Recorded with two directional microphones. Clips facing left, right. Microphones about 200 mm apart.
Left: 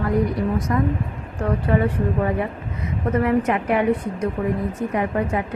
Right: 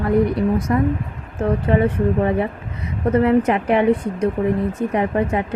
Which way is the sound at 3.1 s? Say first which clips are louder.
Right 4 dB; 30° right (ahead or behind).